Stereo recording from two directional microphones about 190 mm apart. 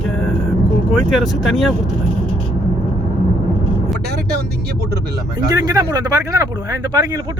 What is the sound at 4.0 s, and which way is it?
Speech, 60° right (ahead or behind).